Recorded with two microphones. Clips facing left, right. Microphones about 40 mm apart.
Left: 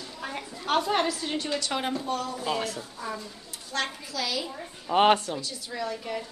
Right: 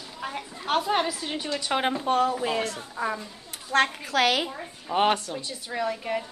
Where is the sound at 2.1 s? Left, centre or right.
Right.